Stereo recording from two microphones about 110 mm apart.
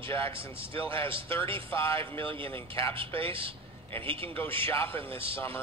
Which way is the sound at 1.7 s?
25° left (ahead or behind).